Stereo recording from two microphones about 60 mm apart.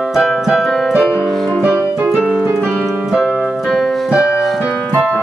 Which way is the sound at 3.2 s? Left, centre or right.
Centre.